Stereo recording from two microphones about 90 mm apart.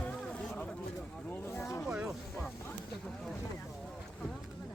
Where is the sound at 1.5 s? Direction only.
30° left (ahead or behind).